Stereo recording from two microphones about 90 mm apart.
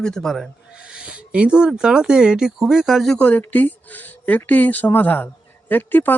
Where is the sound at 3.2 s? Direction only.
15° left (ahead or behind).